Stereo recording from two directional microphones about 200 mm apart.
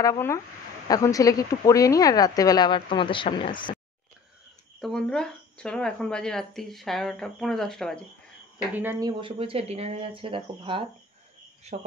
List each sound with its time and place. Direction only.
0.0 s speech: 15° left (ahead or behind)
4.8 s speech: 5° left (ahead or behind)
8.7 s speech: 10° right (ahead or behind)
9.2 s speech: 30° right (ahead or behind)